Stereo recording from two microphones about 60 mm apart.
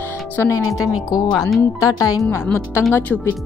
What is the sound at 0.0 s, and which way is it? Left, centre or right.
Speech, left.